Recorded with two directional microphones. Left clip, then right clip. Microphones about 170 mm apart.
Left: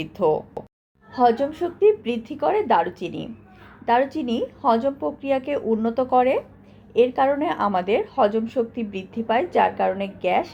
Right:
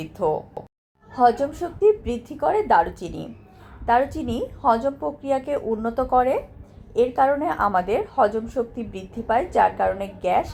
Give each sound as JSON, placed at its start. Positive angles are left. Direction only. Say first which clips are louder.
{"t": 0.0, "sound": "a woman's voice", "louder": "left 3 dB", "side_deg": 25}
{"t": 0.6, "sound": "a sound", "louder": "left 1 dB", "side_deg": 0}
{"t": 1.1, "sound": "a woman's voice", "louder": "even", "side_deg": 20}